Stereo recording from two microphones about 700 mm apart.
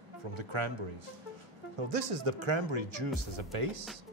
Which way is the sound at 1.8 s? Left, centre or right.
Right.